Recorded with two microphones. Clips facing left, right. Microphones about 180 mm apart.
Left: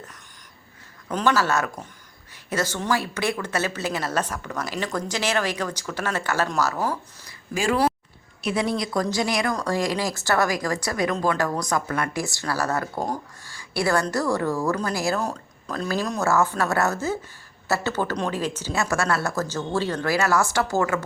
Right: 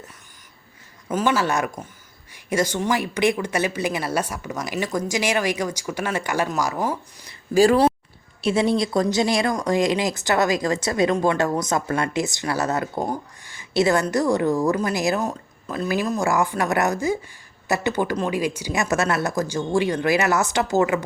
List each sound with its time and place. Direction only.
1.1 s speech: 15° right (ahead or behind)
7.5 s speech: 35° right (ahead or behind); by 15.2 s 20° right (ahead or behind)
15.2 s speech: 5° right (ahead or behind); by 21.0 s 20° right (ahead or behind)